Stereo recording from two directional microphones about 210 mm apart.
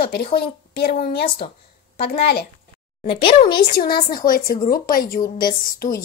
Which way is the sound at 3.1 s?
25° left (ahead or behind).